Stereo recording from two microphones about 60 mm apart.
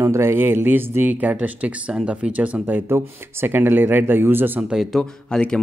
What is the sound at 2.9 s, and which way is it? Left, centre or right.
Speech, right.